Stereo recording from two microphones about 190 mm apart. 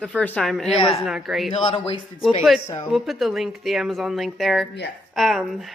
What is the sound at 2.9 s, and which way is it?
A woman's voice, centre (ahead or behind).